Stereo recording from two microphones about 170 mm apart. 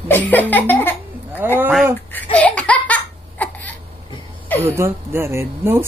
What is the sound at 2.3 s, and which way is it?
Laughter, 10° left (ahead or behind).